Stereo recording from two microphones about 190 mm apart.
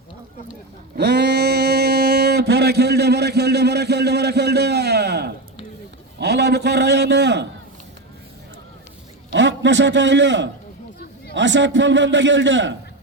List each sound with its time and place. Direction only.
0.9 s a man's voice: 60° right (ahead or behind)
9.3 s a man's voice: 70° right (ahead or behind)